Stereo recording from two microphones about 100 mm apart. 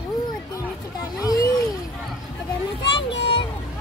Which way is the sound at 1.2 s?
35° left (ahead or behind).